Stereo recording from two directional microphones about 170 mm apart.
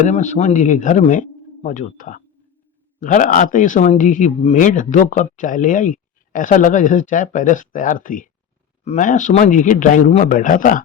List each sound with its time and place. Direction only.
0.1 s speech: 45° left (ahead or behind)